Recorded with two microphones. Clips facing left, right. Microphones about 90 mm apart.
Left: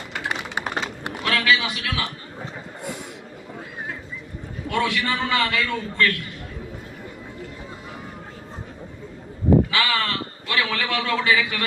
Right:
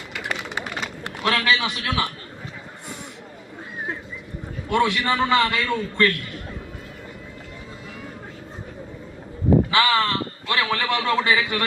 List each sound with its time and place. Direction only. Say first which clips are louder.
1.2 s a man's voice: even; 30° right (ahead or behind)
4.7 s a man's voice: right 3 dB; 25° right (ahead or behind)
9.7 s a man's voice: right 4 dB; 25° right (ahead or behind)